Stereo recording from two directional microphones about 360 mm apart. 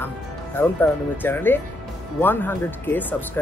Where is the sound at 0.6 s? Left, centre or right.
Centre.